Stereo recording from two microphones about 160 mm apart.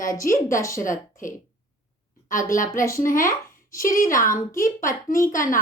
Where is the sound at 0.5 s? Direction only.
20° left (ahead or behind).